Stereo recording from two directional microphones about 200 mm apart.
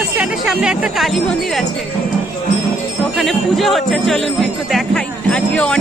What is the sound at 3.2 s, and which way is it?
Speech, centre (ahead or behind).